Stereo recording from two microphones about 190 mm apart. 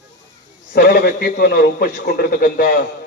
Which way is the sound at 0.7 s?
55° left (ahead or behind).